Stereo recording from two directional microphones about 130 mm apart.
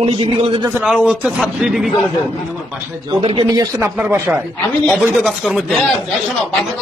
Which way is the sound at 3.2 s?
45° right (ahead or behind).